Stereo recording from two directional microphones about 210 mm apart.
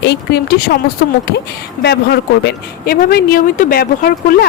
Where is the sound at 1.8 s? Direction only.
50° left (ahead or behind).